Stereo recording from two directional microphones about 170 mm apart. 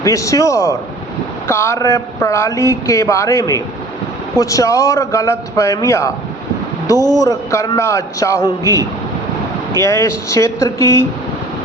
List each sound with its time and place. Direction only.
0.0 s a man's voice: 20° left (ahead or behind)
7.2 s speech: 20° left (ahead or behind)
9.7 s speech: 15° left (ahead or behind)